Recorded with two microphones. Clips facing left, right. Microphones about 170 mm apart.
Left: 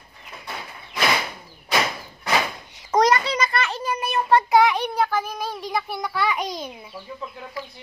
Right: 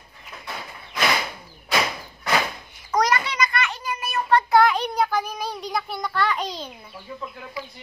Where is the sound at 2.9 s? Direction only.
30° left (ahead or behind).